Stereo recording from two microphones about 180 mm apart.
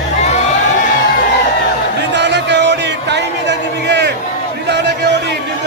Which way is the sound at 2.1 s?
75° right (ahead or behind).